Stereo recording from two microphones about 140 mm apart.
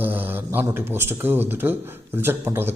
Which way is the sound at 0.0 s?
15° right (ahead or behind).